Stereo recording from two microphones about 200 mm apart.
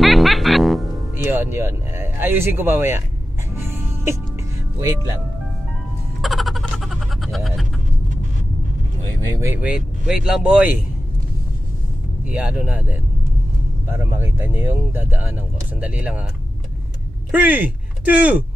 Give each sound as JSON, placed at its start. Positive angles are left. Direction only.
{"t": 0.0, "sound": "music", "side_deg": 0}
{"t": 1.1, "sound": "speech", "side_deg": -10}
{"t": 3.5, "sound": "music", "side_deg": -10}
{"t": 4.7, "sound": "speech", "side_deg": -15}
{"t": 6.2, "sound": "a sound", "side_deg": 0}
{"t": 9.4, "sound": "speech", "side_deg": -10}
{"t": 12.3, "sound": "speech", "side_deg": -5}
{"t": 13.8, "sound": "speech", "side_deg": -10}
{"t": 17.3, "sound": "speech", "side_deg": -10}